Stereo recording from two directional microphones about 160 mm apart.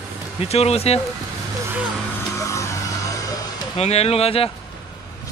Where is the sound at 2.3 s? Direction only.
20° left (ahead or behind).